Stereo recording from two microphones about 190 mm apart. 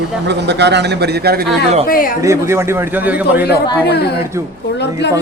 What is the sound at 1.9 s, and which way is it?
Speech, 50° left (ahead or behind).